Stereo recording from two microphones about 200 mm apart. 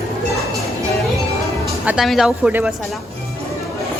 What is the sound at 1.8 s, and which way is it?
Speech, centre (ahead or behind).